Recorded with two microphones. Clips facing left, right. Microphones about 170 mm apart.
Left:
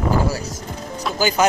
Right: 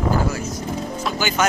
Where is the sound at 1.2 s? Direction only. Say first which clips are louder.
Left 4 dB; 35° left (ahead or behind).